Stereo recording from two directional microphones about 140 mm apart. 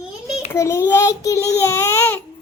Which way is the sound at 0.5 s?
20° left (ahead or behind).